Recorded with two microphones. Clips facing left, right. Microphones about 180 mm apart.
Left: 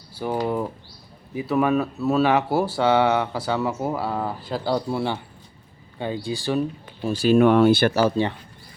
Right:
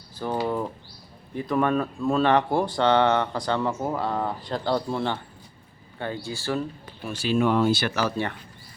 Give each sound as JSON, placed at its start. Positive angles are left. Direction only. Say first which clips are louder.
{"t": 0.1, "sound": "a sound", "louder": "left 2 dB", "side_deg": 10}
{"t": 1.3, "sound": "speech", "louder": "left 3 dB", "side_deg": 5}
{"t": 7.0, "sound": "speech", "louder": "left 8 dB", "side_deg": 35}
{"t": 7.3, "sound": "speech", "louder": "left 6 dB", "side_deg": 60}
{"t": 7.9, "sound": "speech", "louder": "left 6 dB", "side_deg": 25}